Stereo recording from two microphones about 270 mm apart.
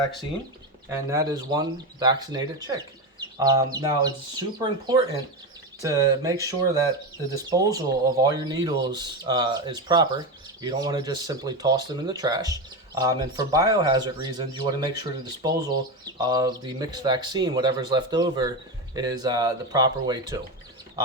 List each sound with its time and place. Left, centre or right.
0.9 s speech: centre
5.8 s speech: centre